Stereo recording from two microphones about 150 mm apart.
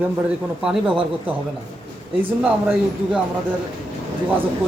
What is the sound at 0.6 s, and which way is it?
Speech, 5° right (ahead or behind).